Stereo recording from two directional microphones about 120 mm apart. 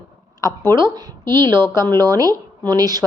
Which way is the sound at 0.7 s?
35° right (ahead or behind).